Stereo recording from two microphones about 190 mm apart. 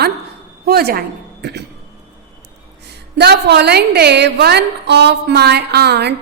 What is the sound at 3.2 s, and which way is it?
A woman's voice, 60° right (ahead or behind).